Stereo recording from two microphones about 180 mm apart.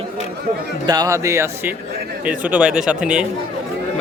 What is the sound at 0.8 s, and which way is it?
Speech, 20° right (ahead or behind).